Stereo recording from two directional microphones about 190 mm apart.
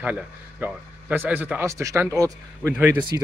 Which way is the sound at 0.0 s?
10° right (ahead or behind).